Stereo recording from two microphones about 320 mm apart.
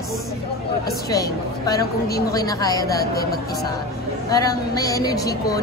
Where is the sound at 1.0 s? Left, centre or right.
Centre.